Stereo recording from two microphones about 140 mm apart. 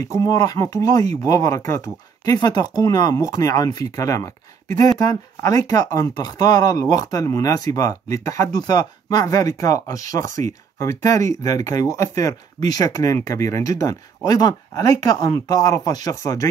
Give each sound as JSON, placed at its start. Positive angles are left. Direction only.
{"t": 0.0, "sound": "speech", "side_deg": 25}